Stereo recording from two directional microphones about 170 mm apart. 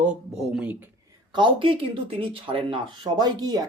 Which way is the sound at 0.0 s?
5° right (ahead or behind).